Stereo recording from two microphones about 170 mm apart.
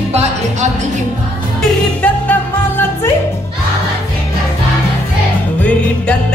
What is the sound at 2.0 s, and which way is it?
Music, 10° left (ahead or behind).